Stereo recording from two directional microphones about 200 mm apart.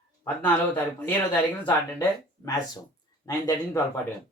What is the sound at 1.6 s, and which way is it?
Speech, 20° left (ahead or behind).